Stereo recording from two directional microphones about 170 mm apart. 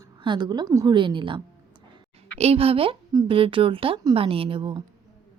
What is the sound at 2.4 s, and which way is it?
A woman's voice, 35° right (ahead or behind).